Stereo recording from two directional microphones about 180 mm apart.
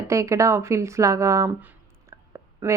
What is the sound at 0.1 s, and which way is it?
Speech, 15° right (ahead or behind).